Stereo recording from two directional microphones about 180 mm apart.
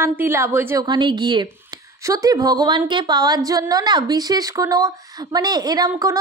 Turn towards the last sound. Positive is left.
turn(degrees=-20)  # may be behind; listen again after turning